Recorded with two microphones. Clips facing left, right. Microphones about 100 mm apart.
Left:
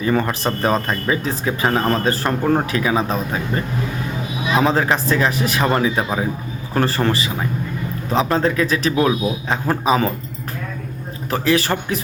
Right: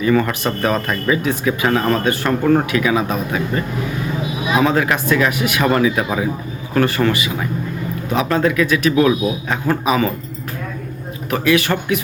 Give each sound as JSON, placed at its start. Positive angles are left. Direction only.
{"t": 0.0, "sound": "speech", "side_deg": 30}
{"t": 4.6, "sound": "speech", "side_deg": 30}
{"t": 11.3, "sound": "speech", "side_deg": 35}